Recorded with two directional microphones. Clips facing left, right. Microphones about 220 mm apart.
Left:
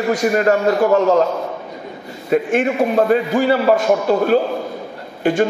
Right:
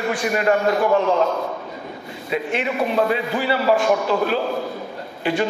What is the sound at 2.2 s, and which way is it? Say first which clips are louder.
A man's voice: left 7 dB; 45° left (ahead or behind).